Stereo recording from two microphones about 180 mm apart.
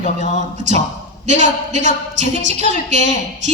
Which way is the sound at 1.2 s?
40° right (ahead or behind).